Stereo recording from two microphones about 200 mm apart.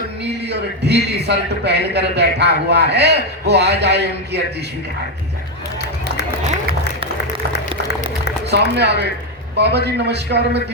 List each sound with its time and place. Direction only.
0.4 s a man's voice: 55° right (ahead or behind)
8.4 s a man's voice: 55° right (ahead or behind)